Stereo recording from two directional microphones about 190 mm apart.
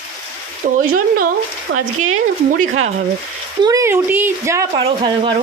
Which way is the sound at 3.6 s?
15° right (ahead or behind).